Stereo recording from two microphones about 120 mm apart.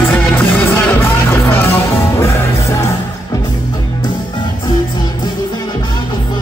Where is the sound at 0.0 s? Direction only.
15° left (ahead or behind).